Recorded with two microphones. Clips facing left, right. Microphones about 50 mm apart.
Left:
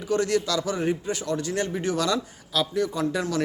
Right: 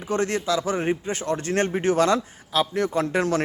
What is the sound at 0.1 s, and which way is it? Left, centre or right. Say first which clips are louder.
A man's voice: even; right.